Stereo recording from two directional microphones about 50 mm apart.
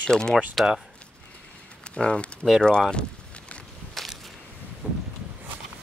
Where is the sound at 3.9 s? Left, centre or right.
Centre.